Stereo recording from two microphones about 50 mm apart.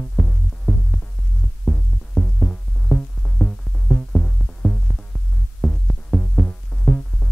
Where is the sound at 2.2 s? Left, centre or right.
Centre.